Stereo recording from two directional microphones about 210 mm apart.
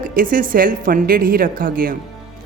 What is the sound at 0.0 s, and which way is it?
A woman's voice, 40° right (ahead or behind).